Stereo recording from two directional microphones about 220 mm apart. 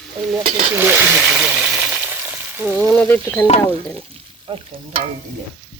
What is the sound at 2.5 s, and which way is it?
Frying, 10° right (ahead or behind).